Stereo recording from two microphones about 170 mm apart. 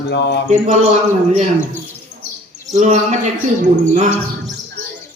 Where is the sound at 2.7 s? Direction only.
45° right (ahead or behind).